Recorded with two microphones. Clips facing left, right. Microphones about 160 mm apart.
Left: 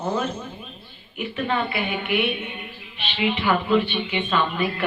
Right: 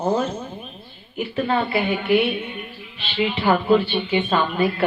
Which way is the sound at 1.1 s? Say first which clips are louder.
Right 3 dB; 35° right (ahead or behind).